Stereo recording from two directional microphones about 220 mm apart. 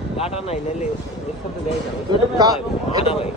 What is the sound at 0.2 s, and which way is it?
Speech, 30° left (ahead or behind).